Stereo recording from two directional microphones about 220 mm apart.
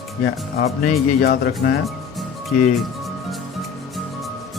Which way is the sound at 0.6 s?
30° left (ahead or behind).